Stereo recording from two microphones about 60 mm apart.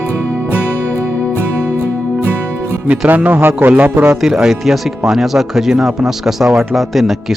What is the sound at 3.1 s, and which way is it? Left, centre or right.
A man's voice, right.